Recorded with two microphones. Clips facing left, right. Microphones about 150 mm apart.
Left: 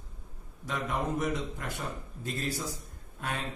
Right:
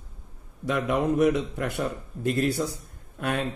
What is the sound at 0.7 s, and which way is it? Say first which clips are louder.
A man's voice: right 8 dB; 70° right (ahead or behind).